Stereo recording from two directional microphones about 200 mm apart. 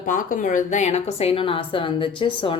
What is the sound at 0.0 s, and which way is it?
Speech, 40° left (ahead or behind).